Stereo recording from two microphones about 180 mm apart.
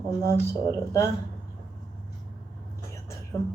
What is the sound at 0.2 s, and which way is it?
Speech, 20° right (ahead or behind).